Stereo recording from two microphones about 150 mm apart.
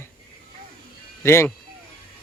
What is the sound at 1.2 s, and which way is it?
Speech, 15° left (ahead or behind).